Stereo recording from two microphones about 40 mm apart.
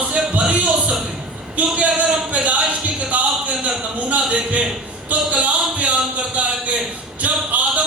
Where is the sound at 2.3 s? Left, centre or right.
Right.